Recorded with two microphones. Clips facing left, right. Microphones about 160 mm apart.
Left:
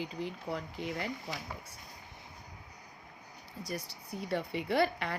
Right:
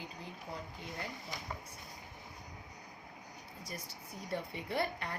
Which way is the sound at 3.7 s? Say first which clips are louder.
Left 8 dB; 75° left (ahead or behind).